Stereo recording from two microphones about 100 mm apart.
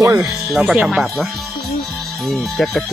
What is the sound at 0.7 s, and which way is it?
Speech, 10° right (ahead or behind).